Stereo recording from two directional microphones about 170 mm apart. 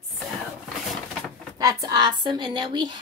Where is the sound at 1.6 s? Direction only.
20° right (ahead or behind).